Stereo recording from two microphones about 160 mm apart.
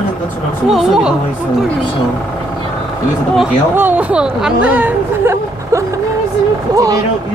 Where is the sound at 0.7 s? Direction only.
5° right (ahead or behind).